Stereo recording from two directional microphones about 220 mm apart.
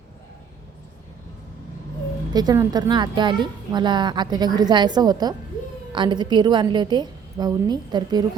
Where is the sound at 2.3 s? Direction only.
20° right (ahead or behind).